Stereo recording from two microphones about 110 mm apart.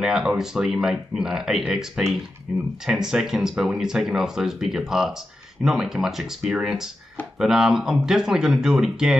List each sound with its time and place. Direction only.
0.0 s speech: 5° right (ahead or behind)